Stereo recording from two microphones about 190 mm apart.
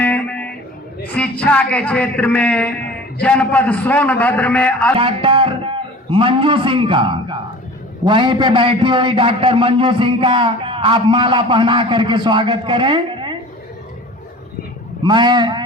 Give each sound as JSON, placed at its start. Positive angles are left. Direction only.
{"t": 0.0, "sound": "guitar", "side_deg": 10}
{"t": 1.1, "sound": "a man's voice", "side_deg": 5}
{"t": 4.9, "sound": "a man's voice", "side_deg": -30}
{"t": 15.0, "sound": "a man's voice", "side_deg": -25}